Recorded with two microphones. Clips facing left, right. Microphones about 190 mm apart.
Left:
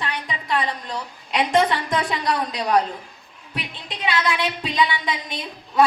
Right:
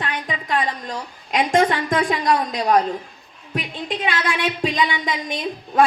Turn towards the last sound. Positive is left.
turn(degrees=-45)  # may be behind; listen again after turning